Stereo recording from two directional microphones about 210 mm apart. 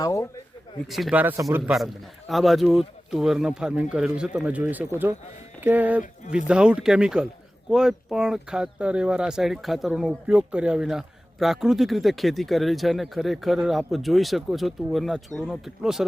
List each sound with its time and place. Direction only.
0.0 s speech: 15° left (ahead or behind)
0.9 s speech: centre (ahead or behind)